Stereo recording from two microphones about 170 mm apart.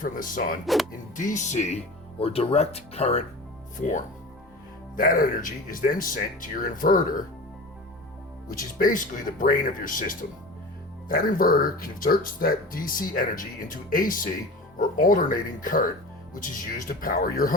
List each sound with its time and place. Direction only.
0.0 s speech: 50° left (ahead or behind)
0.6 s speech: centre (ahead or behind)
1.1 s speech: 50° left (ahead or behind)
3.8 s speech: 50° left (ahead or behind)
8.5 s speech: 55° left (ahead or behind)